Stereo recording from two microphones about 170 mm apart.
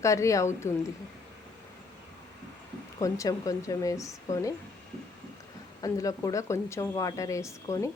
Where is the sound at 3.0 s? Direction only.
20° left (ahead or behind).